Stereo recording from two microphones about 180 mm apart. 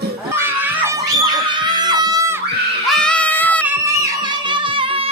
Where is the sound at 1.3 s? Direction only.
25° right (ahead or behind).